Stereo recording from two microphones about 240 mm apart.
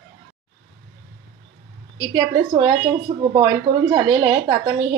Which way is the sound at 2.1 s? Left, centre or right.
Centre.